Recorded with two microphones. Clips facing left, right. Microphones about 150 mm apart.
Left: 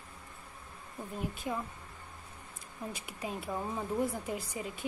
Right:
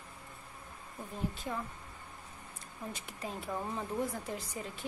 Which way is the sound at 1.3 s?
15° left (ahead or behind).